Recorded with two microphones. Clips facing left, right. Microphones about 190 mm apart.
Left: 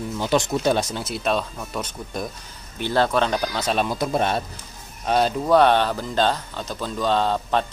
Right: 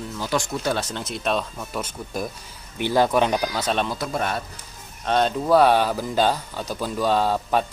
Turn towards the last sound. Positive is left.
turn(degrees=-10)  # may be behind; listen again after turning